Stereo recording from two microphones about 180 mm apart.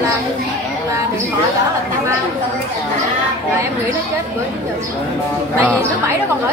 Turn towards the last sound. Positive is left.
turn(degrees=-15)  # may be behind; listen again after turning